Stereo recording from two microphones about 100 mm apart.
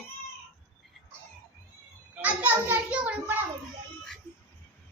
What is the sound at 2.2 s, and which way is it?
A child's voice, 15° right (ahead or behind).